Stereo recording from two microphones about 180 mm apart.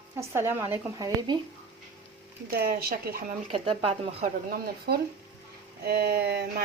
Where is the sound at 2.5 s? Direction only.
60° right (ahead or behind).